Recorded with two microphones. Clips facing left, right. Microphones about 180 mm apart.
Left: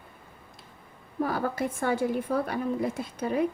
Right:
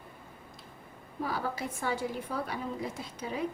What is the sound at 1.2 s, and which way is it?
A woman's voice, 55° left (ahead or behind).